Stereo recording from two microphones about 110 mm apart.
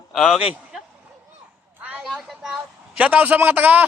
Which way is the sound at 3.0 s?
15° right (ahead or behind).